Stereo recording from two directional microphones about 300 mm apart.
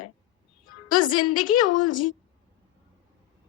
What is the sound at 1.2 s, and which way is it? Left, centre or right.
Speech, left.